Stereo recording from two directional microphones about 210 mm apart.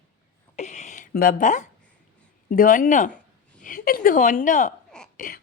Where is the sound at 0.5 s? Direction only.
35° left (ahead or behind).